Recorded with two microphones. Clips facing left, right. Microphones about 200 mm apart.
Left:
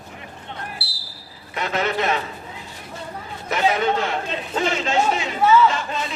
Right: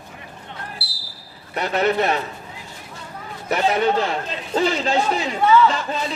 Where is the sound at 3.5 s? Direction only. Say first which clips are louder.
Right 1 dB; 35° right (ahead or behind).